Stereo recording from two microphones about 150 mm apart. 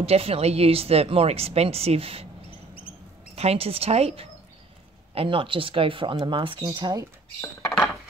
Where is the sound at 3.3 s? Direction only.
45° right (ahead or behind); by 7.0 s 25° right (ahead or behind).